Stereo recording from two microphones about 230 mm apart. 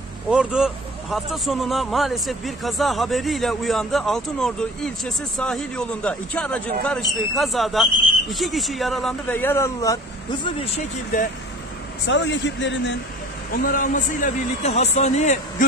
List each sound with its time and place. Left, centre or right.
0.3 s speech: centre
12.1 s speech: left
13.5 s speech: left